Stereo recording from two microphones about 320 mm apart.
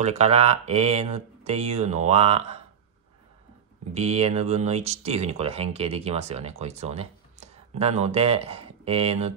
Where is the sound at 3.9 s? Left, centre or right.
Centre.